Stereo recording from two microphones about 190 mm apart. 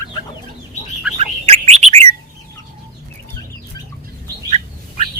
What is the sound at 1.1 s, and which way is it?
Bird, 35° right (ahead or behind).